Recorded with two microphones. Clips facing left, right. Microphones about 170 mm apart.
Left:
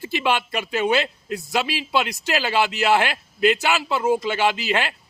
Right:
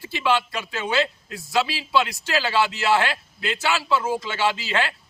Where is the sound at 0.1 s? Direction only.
20° left (ahead or behind).